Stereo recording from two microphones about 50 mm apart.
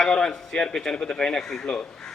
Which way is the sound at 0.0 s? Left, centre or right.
Centre.